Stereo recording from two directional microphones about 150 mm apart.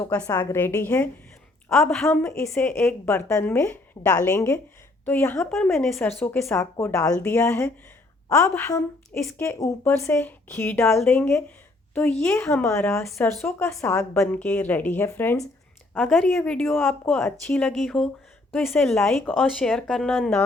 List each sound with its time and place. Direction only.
0.3 s speech: 15° left (ahead or behind)
1.7 s a woman's voice: centre (ahead or behind)
2.0 s a woman's voice: 15° left (ahead or behind)
5.7 s a woman's voice: centre (ahead or behind)
6.0 s speech: 15° left (ahead or behind)
16.0 s a woman's voice: centre (ahead or behind)